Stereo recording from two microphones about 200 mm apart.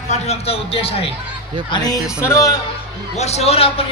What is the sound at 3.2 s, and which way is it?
Speech, 30° left (ahead or behind).